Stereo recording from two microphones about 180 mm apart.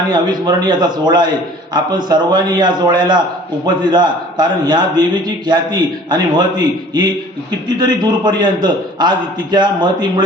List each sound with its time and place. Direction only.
0.1 s a man's voice: 25° right (ahead or behind)